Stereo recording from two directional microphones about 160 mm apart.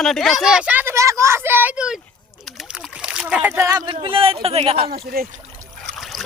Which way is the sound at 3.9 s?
35° right (ahead or behind).